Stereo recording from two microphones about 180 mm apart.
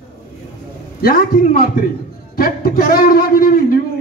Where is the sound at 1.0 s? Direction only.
55° left (ahead or behind).